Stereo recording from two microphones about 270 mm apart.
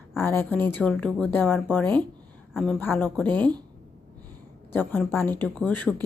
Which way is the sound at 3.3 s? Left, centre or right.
Centre.